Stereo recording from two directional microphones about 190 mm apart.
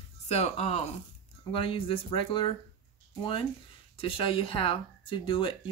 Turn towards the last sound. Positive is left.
turn(degrees=25)  # may be behind; listen again after turning